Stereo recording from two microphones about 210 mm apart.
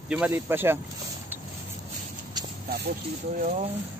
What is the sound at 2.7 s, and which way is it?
Speech, 50° right (ahead or behind).